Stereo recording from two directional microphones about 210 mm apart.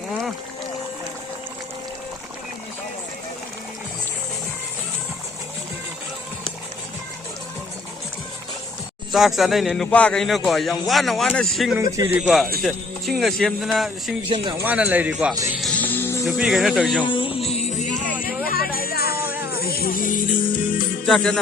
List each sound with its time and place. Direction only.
0.1 s a sound: centre (ahead or behind)
9.1 s a man's voice: centre (ahead or behind)
11.8 s a man's voice: 15° right (ahead or behind)
14.3 s speech: 25° right (ahead or behind)
14.5 s a man's voice: 10° right (ahead or behind)
15.5 s music: 5° left (ahead or behind)
16.2 s a man's voice: centre (ahead or behind)
17.0 s music: 25° left (ahead or behind); by 19.1 s 45° left (ahead or behind)
19.1 s music: 10° right (ahead or behind)
19.5 s music: 45° left (ahead or behind)
21.1 s a man's voice: centre (ahead or behind)